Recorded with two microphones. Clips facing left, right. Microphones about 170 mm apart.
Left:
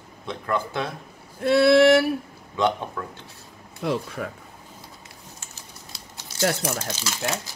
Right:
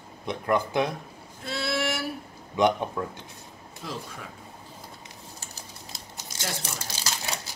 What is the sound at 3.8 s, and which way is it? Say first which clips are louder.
Female singing: left 11 dB; 65° left (ahead or behind).